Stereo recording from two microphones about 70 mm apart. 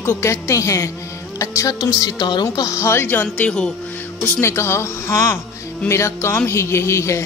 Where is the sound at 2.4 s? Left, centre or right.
Left; by 3.7 s centre.